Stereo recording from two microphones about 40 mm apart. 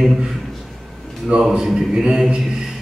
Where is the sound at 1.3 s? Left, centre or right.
Right.